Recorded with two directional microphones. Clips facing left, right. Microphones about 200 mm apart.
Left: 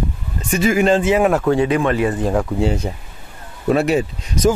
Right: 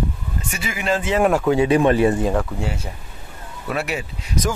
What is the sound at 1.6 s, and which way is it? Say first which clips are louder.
Speech: right 2 dB; 30° right (ahead or behind).